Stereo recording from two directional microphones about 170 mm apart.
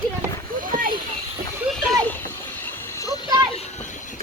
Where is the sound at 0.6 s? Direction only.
55° right (ahead or behind).